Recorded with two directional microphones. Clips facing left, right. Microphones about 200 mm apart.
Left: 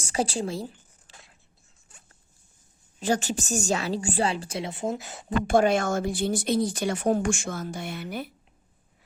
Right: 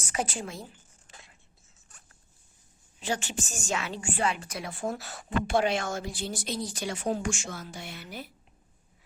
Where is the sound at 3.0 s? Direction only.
40° left (ahead or behind); by 5.2 s 20° left (ahead or behind).